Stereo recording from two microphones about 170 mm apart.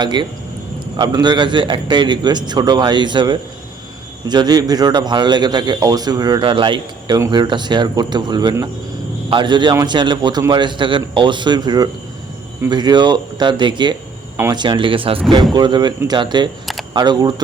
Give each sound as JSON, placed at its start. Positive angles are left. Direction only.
{"t": 0.0, "sound": "a man's voice", "side_deg": -25}